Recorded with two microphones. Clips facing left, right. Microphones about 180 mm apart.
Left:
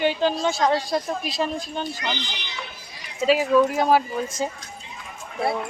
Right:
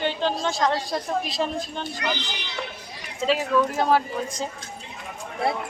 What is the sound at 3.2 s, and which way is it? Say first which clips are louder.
A woman's voice: left 4 dB; 10° left (ahead or behind).